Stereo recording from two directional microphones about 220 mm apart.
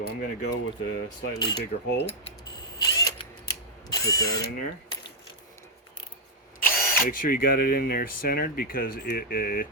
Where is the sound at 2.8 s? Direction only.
20° left (ahead or behind).